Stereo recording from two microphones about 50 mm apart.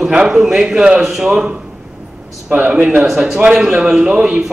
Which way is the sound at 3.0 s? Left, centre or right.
Centre.